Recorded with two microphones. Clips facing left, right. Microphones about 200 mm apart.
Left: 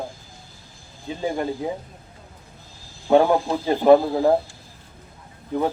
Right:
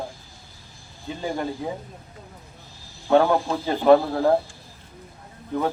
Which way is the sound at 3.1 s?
15° left (ahead or behind).